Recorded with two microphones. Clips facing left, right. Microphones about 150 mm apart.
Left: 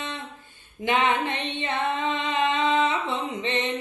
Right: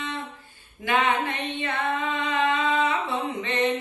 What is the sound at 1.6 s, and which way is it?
Singing, 20° left (ahead or behind).